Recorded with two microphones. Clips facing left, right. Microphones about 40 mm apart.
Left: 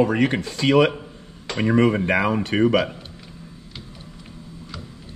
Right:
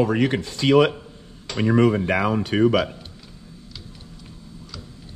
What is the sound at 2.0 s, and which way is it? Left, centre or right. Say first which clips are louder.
Speech: left 1 dB; left.